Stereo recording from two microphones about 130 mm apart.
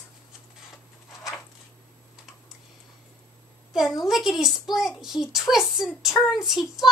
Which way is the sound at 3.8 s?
Centre (ahead or behind).